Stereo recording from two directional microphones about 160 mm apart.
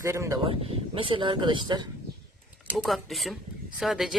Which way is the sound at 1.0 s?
35° right (ahead or behind).